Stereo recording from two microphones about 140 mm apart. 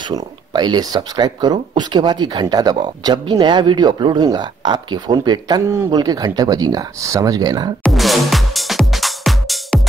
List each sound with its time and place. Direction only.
0.1 s speech: 30° right (ahead or behind)
7.8 s music: centre (ahead or behind)